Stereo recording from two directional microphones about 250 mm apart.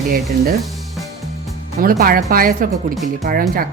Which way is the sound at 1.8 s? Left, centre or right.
Right.